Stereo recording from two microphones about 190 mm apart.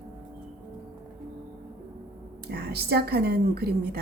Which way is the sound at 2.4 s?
55° right (ahead or behind).